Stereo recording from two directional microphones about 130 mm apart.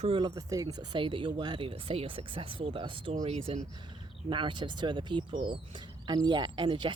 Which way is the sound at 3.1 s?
55° right (ahead or behind).